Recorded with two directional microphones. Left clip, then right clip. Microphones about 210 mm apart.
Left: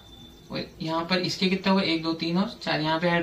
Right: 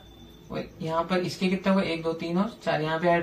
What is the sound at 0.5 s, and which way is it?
Speech, 10° left (ahead or behind).